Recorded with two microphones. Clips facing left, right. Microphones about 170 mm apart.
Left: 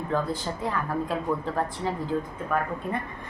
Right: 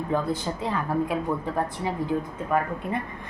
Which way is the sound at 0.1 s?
15° right (ahead or behind).